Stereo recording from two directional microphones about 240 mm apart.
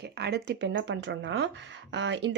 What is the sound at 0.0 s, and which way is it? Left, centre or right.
Speech, right.